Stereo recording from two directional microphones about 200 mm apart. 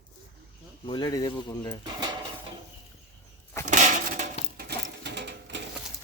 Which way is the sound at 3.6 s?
40° right (ahead or behind).